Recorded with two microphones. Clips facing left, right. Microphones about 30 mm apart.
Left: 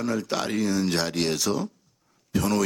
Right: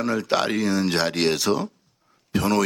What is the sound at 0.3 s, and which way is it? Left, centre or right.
Speech, right.